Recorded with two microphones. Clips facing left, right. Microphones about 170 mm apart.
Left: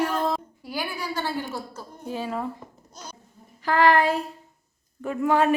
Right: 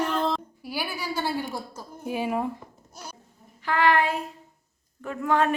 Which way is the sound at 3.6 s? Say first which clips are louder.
Left 3 dB; 40° left (ahead or behind).